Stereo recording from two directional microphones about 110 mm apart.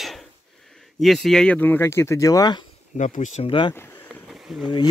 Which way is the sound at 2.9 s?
90° left.